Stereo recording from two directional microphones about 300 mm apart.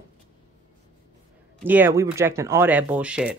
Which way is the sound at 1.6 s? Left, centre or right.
Centre.